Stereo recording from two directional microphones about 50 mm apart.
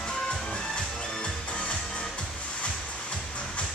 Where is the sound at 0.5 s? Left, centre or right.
Centre.